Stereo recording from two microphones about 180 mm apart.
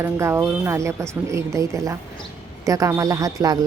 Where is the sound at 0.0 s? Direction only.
15° right (ahead or behind).